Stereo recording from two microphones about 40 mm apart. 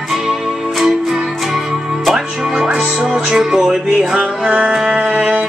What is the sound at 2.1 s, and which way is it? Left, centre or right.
Music, centre.